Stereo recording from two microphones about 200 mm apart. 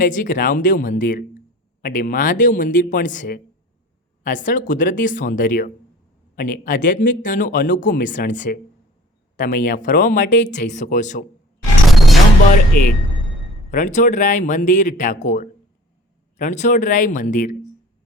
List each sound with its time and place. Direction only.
0.0 s speech: 40° left (ahead or behind)
11.9 s a sound: centre (ahead or behind)
12.8 s speech: 40° left (ahead or behind)